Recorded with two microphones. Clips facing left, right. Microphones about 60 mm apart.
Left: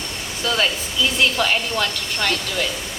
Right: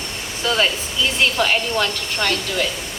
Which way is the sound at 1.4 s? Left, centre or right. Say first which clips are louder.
Right 2 dB; right.